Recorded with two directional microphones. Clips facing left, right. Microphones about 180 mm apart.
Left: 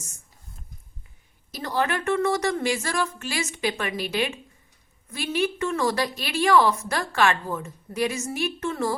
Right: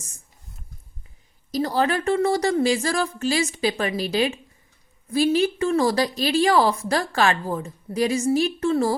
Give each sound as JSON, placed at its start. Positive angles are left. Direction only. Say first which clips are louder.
{"t": 1.5, "sound": "a woman's voice", "louder": "right 4 dB", "side_deg": -35}